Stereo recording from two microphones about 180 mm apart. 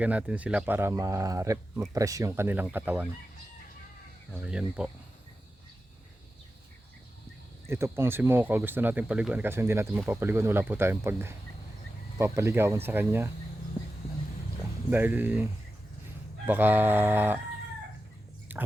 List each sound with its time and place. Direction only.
0.0 s speech: 10° right (ahead or behind)
4.3 s speech: 5° right (ahead or behind)
7.7 s speech: 15° right (ahead or behind)
14.8 s speech: 10° right (ahead or behind)
16.5 s speech: 10° right (ahead or behind)
18.5 s chewing: 10° right (ahead or behind)